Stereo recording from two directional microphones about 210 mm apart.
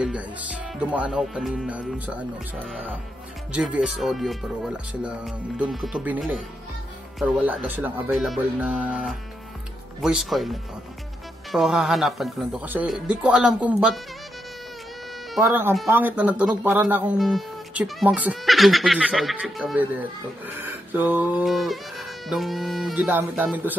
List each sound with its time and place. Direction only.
0.7 s speech: 5° right (ahead or behind)
3.5 s speech: 5° right (ahead or behind)
15.3 s speech: centre (ahead or behind)